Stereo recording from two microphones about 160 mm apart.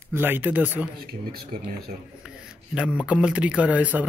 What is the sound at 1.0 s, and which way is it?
Speech, 75° right (ahead or behind).